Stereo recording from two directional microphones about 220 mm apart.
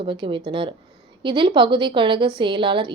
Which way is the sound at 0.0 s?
20° right (ahead or behind).